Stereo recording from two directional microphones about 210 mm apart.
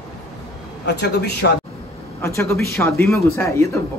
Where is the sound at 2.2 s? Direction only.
10° left (ahead or behind).